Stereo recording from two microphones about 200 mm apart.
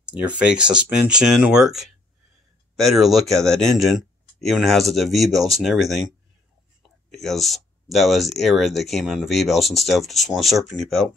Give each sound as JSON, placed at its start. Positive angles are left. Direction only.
{"t": 0.0, "sound": "speech", "side_deg": -5}
{"t": 7.1, "sound": "speech", "side_deg": 0}